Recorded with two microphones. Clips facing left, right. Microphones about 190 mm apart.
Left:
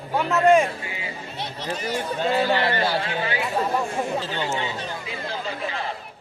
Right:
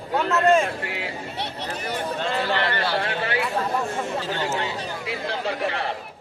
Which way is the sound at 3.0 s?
65° right (ahead or behind).